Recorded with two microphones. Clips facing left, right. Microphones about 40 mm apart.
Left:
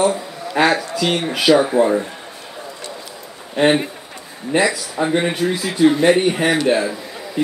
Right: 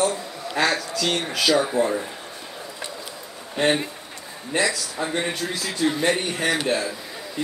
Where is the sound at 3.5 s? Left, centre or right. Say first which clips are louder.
Left 6 dB; left.